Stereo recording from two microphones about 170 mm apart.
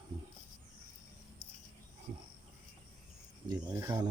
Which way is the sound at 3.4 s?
20° right (ahead or behind).